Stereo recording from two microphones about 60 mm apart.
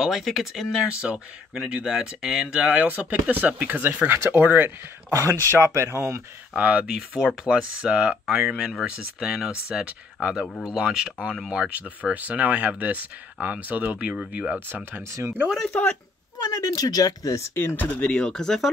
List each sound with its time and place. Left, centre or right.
0.0 s speech: centre
0.8 s speech: centre; by 4.7 s right
5.1 s speech: right
6.5 s speech: right
8.4 s speech: centre
8.8 s speech: centre
15.0 s speech: right
16.3 s speech: left
17.6 s speech: left
17.9 s speech: centre